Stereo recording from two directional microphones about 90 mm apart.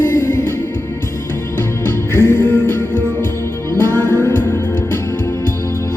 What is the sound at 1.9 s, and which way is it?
Music, 25° left (ahead or behind).